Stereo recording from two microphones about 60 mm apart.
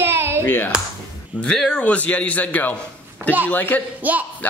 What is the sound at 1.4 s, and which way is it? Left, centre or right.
A man's voice, centre.